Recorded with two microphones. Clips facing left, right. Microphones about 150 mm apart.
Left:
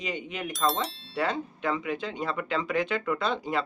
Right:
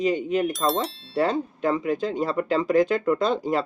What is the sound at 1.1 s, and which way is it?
Speech, 40° right (ahead or behind).